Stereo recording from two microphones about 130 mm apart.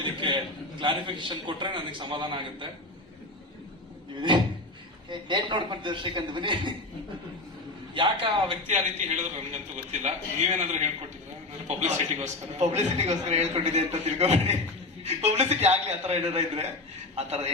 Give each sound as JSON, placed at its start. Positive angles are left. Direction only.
{"t": 0.2, "sound": "a sound", "side_deg": -40}
{"t": 0.8, "sound": "a man's voice", "side_deg": -40}
{"t": 5.0, "sound": "a man's voice", "side_deg": -40}
{"t": 7.9, "sound": "a man's voice", "side_deg": -40}
{"t": 8.6, "sound": "a man's voice", "side_deg": -60}